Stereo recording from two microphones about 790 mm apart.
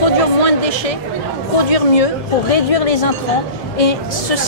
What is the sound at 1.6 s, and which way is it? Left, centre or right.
Speech, left.